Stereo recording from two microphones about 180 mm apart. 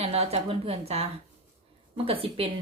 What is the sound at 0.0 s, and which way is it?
Speech, 35° right (ahead or behind).